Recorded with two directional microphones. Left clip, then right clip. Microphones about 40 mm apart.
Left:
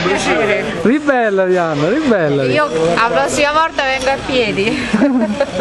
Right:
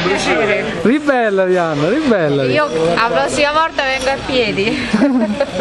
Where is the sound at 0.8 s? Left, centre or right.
Right.